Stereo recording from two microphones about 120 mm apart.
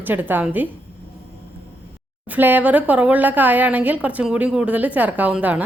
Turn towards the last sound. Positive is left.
turn(degrees=-15)  # may be behind; listen again after turning